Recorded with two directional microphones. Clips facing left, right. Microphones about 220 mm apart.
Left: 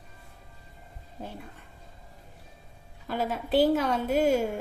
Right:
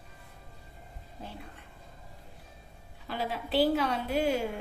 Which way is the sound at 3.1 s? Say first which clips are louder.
Left 5 dB; 45° left (ahead or behind).